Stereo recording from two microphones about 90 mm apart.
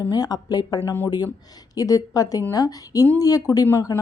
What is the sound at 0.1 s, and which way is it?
Speech, 45° left (ahead or behind).